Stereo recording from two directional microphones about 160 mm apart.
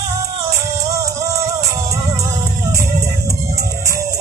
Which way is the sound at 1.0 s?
20° right (ahead or behind).